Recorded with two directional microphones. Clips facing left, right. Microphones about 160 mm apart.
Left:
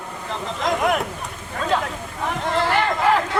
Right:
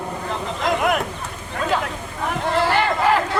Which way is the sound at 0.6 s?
Centre (ahead or behind).